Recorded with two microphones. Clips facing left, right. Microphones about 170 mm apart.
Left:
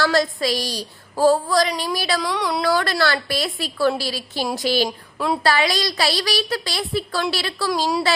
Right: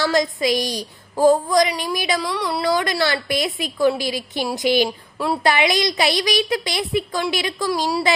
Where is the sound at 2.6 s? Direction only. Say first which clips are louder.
Right 1 dB; 20° right (ahead or behind).